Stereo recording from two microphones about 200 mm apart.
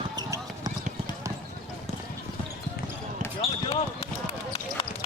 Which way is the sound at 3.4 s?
30° left (ahead or behind).